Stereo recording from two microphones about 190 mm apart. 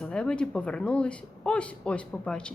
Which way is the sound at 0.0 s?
5° left (ahead or behind).